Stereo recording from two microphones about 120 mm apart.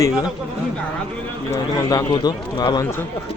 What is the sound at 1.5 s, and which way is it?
A man's voice, 30° left (ahead or behind).